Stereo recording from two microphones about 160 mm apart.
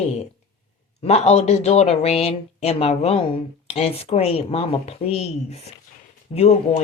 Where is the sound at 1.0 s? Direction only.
40° left (ahead or behind).